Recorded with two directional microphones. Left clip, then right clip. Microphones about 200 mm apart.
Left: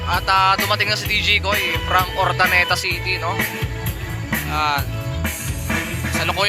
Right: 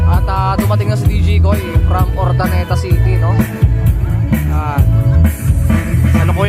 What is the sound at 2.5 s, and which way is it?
Speech, 50° left (ahead or behind).